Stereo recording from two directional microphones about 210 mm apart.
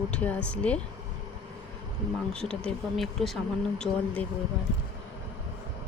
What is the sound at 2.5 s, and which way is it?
Speech, centre (ahead or behind).